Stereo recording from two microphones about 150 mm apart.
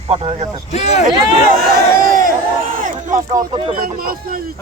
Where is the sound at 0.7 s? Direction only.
50° left (ahead or behind).